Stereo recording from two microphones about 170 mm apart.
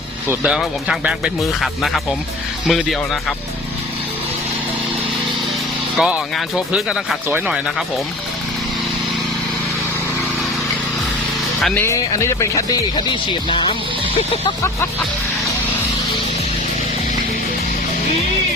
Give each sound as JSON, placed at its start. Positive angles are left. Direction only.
{"t": 0.3, "sound": "speech", "side_deg": -5}
{"t": 6.0, "sound": "speech", "side_deg": -5}
{"t": 11.6, "sound": "speech", "side_deg": 10}